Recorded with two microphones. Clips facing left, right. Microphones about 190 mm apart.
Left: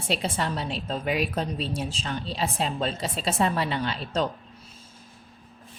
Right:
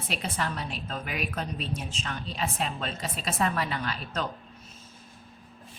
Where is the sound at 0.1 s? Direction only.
30° left (ahead or behind).